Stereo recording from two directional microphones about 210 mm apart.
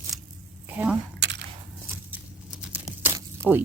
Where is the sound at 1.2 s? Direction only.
55° right (ahead or behind).